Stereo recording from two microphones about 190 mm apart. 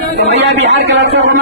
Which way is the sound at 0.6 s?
65° right (ahead or behind).